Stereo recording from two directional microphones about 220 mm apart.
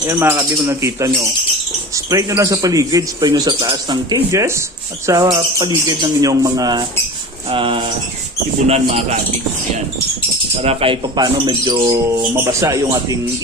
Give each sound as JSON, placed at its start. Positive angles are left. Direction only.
{"t": 0.0, "sound": "speech", "side_deg": -10}
{"t": 10.6, "sound": "speech", "side_deg": -25}